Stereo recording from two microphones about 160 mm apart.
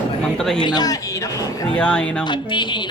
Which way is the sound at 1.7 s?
5° left (ahead or behind).